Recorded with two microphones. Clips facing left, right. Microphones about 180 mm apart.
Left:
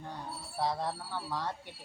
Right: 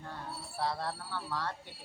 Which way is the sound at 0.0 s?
15° left (ahead or behind).